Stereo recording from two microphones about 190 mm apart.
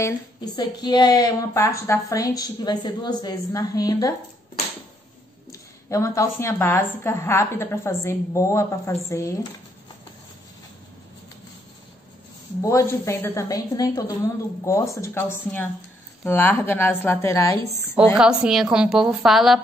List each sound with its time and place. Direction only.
0.6 s a woman's voice: 20° left (ahead or behind)
5.5 s a woman's voice: 15° left (ahead or behind)
12.6 s a woman's voice: 15° left (ahead or behind)
17.9 s a woman's voice: 5° right (ahead or behind)